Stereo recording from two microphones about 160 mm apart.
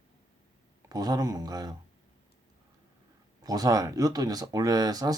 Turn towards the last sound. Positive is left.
turn(degrees=-25)  # may be behind; listen again after turning